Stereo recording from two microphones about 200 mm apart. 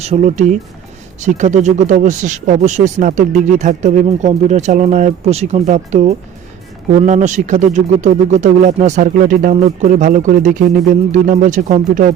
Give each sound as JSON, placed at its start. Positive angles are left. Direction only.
{"t": 0.0, "sound": "speech", "side_deg": -30}